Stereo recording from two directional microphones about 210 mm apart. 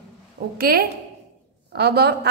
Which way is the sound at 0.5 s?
45° right (ahead or behind).